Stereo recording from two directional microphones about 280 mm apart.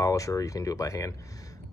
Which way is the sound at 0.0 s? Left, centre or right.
Centre.